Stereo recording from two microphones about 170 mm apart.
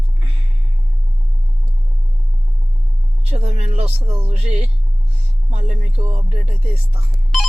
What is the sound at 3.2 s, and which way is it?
Speech, 40° right (ahead or behind).